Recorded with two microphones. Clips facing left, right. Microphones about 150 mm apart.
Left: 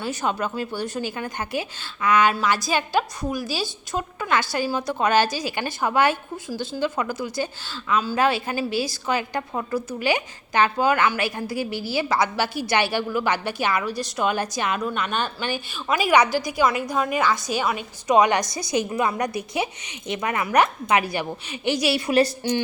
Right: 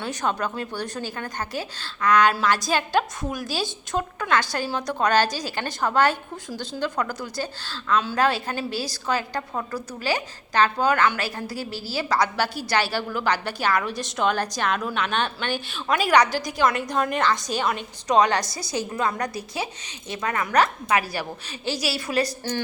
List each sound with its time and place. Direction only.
0.0 s a woman's voice: 5° left (ahead or behind)
16.3 s a woman's voice: 40° right (ahead or behind)
16.6 s a woman's voice: 5° left (ahead or behind); by 22.3 s 25° left (ahead or behind)